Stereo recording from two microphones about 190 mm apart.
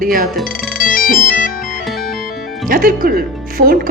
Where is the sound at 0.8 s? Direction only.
45° left (ahead or behind).